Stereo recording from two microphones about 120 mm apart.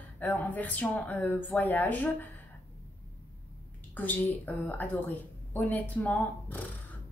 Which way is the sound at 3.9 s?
15° left (ahead or behind).